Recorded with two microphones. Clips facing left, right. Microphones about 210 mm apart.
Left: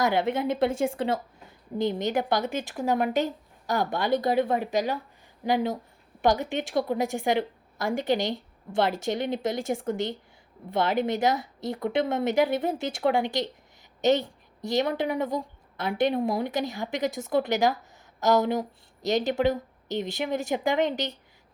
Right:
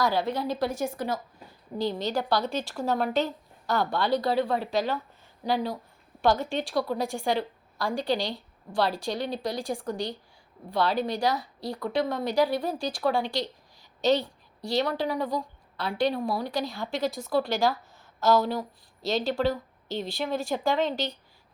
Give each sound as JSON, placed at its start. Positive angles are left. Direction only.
{"t": 0.0, "sound": "a woman's voice", "side_deg": 20}